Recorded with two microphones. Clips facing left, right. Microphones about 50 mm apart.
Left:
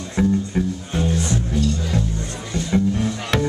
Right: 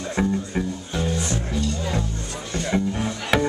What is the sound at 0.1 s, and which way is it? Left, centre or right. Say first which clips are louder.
Music: left 4 dB; centre.